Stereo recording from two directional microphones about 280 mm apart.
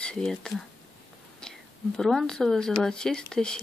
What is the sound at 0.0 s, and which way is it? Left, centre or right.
Speech, centre.